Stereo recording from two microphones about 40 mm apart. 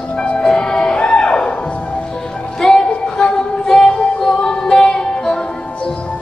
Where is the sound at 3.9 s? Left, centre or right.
Left.